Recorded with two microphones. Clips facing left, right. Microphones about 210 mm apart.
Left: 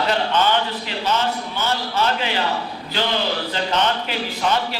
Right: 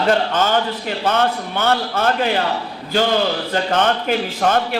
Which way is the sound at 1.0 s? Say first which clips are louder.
Right 4 dB; 55° right (ahead or behind).